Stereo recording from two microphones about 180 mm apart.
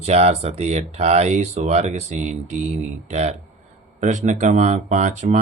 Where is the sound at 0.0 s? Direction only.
35° right (ahead or behind).